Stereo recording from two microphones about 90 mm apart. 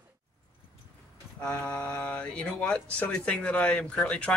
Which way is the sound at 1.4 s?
15° left (ahead or behind).